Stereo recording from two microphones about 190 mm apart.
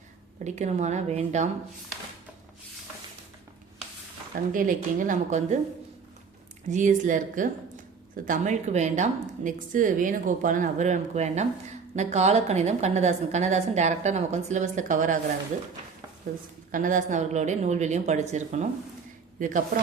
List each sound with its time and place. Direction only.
0.4 s a woman's voice: 35° right (ahead or behind)
4.5 s a woman's voice: 45° right (ahead or behind)
6.7 s a woman's voice: 40° right (ahead or behind)
16.7 s a woman's voice: 45° right (ahead or behind)